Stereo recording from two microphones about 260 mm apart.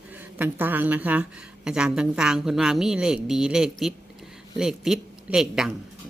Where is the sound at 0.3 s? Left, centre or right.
Centre.